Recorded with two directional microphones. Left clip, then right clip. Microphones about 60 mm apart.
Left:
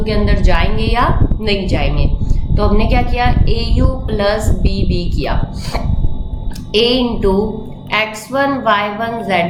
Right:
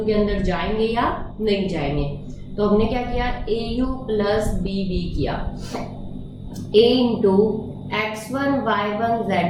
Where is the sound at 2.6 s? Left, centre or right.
Centre.